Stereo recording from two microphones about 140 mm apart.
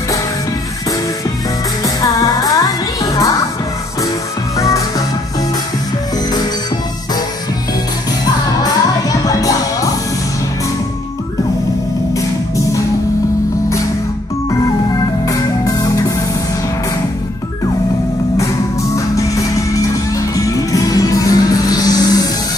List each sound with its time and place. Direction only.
2.0 s music: 25° left (ahead or behind)
4.6 s music: 25° left (ahead or behind)
9.2 s music: 25° left (ahead or behind)
12.1 s music: 20° left (ahead or behind)
14.6 s music: 25° left (ahead or behind)
18.4 s music: 20° left (ahead or behind)